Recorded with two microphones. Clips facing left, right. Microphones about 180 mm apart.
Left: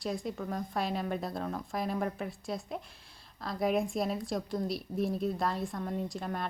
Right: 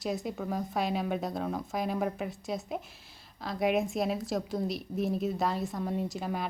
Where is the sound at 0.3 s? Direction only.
5° right (ahead or behind).